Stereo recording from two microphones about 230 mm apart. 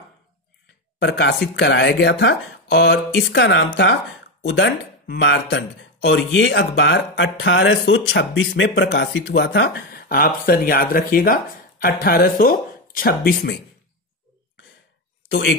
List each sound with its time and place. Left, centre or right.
0.9 s speech: left
15.2 s speech: left